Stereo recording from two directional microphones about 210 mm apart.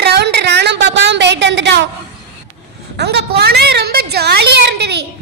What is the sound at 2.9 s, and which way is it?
A woman's voice, 50° right (ahead or behind).